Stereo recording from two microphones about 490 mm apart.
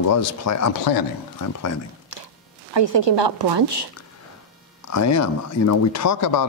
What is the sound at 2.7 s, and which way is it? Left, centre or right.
A woman's voice, right.